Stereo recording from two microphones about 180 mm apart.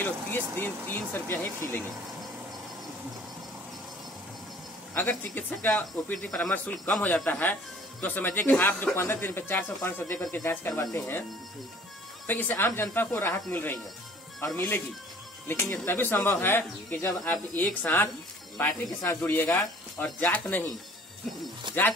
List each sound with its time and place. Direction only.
0.0 s speech: 10° left (ahead or behind)
4.9 s speech: 10° left (ahead or behind)
12.3 s speech: 10° left (ahead or behind)
21.7 s speech: 25° right (ahead or behind)